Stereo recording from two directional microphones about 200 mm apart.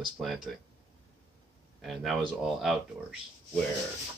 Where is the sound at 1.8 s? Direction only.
Centre (ahead or behind).